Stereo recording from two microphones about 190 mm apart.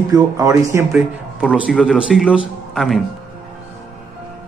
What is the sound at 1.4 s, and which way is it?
Speech, 5° right (ahead or behind).